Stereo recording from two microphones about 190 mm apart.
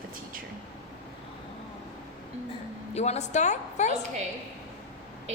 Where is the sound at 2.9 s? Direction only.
35° left (ahead or behind).